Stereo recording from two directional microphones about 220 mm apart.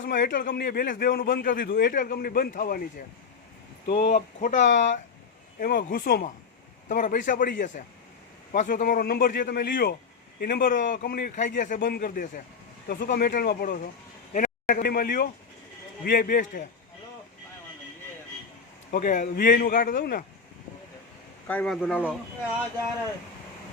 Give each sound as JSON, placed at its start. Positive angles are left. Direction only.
{"t": 0.1, "sound": "a man's voice", "side_deg": 40}
{"t": 3.8, "sound": "a man's voice", "side_deg": 35}
{"t": 18.9, "sound": "a man's voice", "side_deg": 35}
{"t": 21.4, "sound": "speech", "side_deg": 5}